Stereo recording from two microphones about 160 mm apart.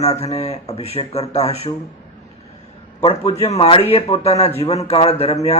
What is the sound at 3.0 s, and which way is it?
A man's voice, 40° left (ahead or behind).